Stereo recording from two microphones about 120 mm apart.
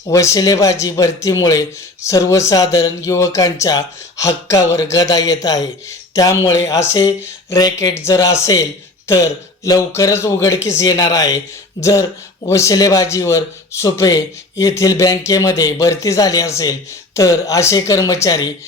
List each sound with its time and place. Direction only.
0.1 s speech: 25° left (ahead or behind)